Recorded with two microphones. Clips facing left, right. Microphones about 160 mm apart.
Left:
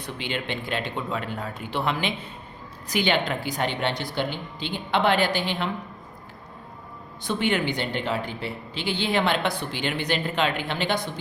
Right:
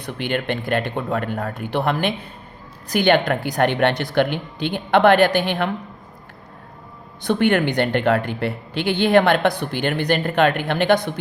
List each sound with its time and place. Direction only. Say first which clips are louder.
0.0 s speech: right 7 dB; 60° right (ahead or behind)
7.3 s speech: right 7 dB; 55° right (ahead or behind)